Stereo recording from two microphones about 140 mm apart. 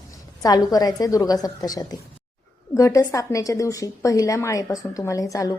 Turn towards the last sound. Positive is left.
turn(degrees=25)  # may be behind; listen again after turning